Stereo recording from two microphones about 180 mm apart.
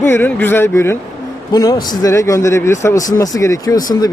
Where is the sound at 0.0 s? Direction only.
10° left (ahead or behind).